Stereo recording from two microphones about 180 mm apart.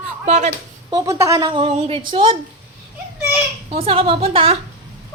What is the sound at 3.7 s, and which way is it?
Speech, 30° right (ahead or behind).